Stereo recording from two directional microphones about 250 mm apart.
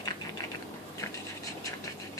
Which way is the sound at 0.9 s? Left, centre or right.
Centre.